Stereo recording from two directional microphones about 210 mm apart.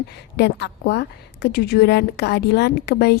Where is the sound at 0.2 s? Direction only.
55° left (ahead or behind).